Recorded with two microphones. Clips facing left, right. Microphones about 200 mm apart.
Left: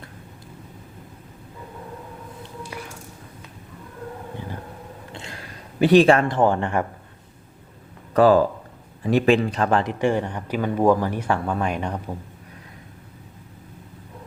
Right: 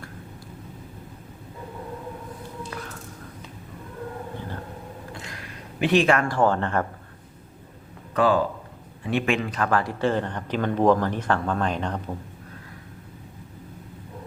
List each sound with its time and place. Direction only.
2.6 s a sound: 10° left (ahead or behind)
5.1 s speech: 30° left (ahead or behind)
8.1 s speech: 40° left (ahead or behind); by 12.1 s 10° left (ahead or behind)